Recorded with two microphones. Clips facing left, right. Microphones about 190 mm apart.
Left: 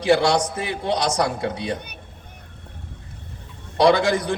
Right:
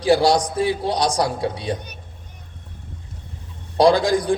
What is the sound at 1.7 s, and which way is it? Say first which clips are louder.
Speech: right 2 dB; 60° left (ahead or behind).